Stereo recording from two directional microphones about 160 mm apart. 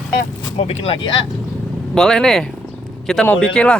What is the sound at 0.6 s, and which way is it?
Speech, 40° left (ahead or behind).